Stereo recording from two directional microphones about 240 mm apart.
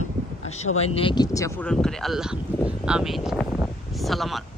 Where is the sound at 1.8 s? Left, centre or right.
Centre.